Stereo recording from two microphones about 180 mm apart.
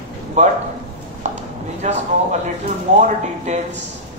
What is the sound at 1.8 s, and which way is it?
Speech, 40° right (ahead or behind).